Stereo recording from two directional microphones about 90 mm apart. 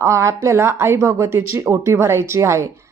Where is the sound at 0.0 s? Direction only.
35° right (ahead or behind).